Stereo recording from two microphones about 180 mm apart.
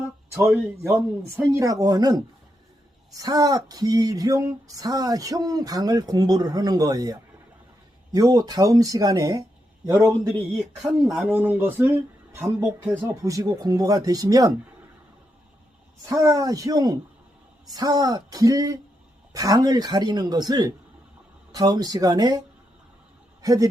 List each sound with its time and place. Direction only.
0.3 s speech: 15° right (ahead or behind)
16.0 s a man's voice: 15° right (ahead or behind)